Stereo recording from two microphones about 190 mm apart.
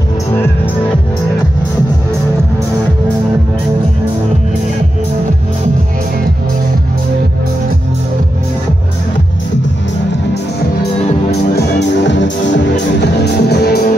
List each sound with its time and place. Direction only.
11.5 s music: 65° left (ahead or behind)